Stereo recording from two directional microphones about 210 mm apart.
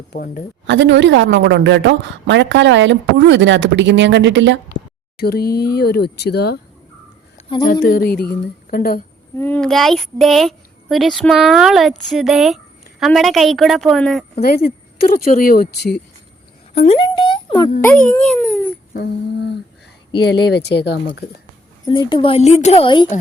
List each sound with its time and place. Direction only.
0.1 s a woman's voice: 45° left (ahead or behind)
0.7 s a woman's voice: 60° right (ahead or behind)
5.1 s a woman's voice: 45° left (ahead or behind)
7.4 s a sound: 25° left (ahead or behind)
7.7 s a woman's voice: 45° left (ahead or behind)
9.3 s a woman's voice: 10° left (ahead or behind)
14.4 s a woman's voice: 45° left (ahead or behind)
16.7 s speech: 30° left (ahead or behind)
17.7 s speech: 10° left (ahead or behind)
18.9 s a woman's voice: 55° left (ahead or behind)
21.8 s a woman's voice: 25° left (ahead or behind)